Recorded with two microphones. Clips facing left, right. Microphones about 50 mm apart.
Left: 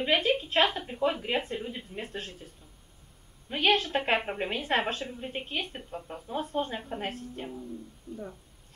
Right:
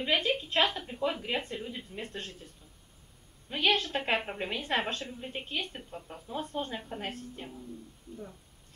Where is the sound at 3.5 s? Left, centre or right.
Centre.